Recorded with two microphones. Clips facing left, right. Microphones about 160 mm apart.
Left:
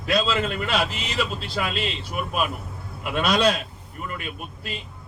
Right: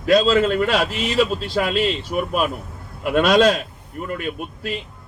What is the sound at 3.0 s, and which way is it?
Speech, 45° right (ahead or behind).